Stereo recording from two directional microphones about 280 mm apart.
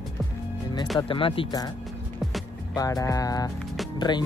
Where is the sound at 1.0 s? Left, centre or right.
Centre.